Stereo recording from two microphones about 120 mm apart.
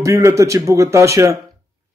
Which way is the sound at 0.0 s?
25° right (ahead or behind).